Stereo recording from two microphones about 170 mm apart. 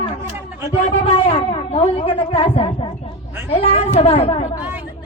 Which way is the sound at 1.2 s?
35° left (ahead or behind).